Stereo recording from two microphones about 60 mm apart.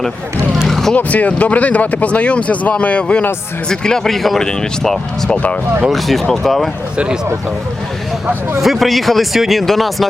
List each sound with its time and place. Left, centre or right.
0.7 s vehicle: centre
0.9 s speech: left; by 6.7 s centre
6.9 s a man's voice: centre
8.6 s speech: centre